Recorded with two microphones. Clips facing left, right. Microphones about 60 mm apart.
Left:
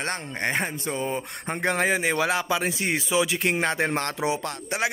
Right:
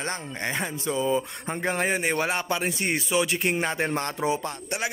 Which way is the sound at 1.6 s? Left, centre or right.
Left.